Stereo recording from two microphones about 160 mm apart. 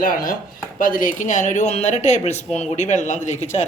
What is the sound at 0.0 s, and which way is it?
Chopping, 60° left (ahead or behind).